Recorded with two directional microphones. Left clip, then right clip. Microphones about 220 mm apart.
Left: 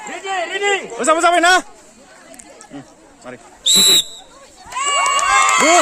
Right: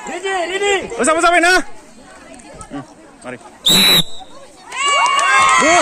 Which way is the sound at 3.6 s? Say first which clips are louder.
Right 1 dB; 50° right (ahead or behind).